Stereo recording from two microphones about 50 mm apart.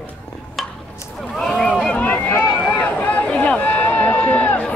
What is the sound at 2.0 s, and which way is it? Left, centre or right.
Run, left.